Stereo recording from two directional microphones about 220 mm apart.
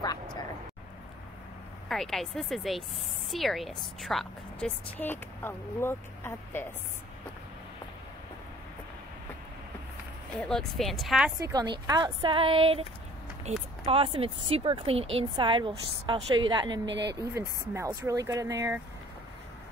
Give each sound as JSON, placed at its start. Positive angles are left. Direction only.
{"t": 1.9, "sound": "a woman's voice", "side_deg": 0}
{"t": 10.4, "sound": "a woman's voice", "side_deg": 5}
{"t": 11.3, "sound": "speech", "side_deg": -15}
{"t": 16.8, "sound": "speech", "side_deg": -50}
{"t": 17.2, "sound": "speech", "side_deg": -15}